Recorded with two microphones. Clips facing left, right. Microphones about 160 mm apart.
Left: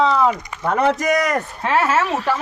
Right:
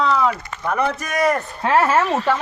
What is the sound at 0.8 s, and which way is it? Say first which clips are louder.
Speech: left 2 dB; 90° left.